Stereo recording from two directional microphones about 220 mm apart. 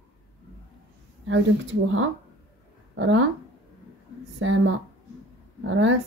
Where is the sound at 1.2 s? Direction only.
60° right (ahead or behind).